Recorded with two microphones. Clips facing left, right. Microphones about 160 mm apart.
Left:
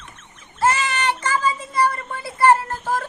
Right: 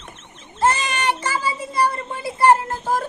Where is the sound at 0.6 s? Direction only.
20° right (ahead or behind).